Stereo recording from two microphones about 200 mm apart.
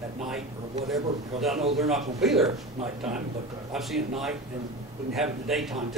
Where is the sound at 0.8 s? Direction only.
Centre (ahead or behind).